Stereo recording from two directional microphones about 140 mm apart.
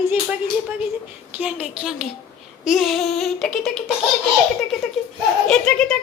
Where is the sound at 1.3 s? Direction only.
10° right (ahead or behind).